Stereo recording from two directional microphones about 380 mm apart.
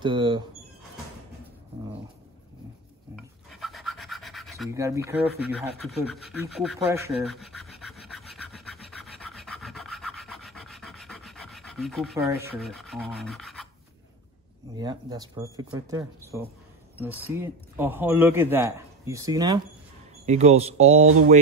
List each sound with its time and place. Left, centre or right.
0.0 s speech: centre
3.4 s rub: centre
14.8 s speech: centre